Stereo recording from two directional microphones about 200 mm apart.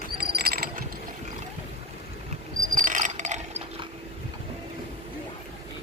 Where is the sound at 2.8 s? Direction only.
40° right (ahead or behind).